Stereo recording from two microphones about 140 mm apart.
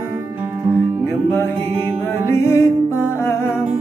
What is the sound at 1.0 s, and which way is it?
Music, 20° left (ahead or behind).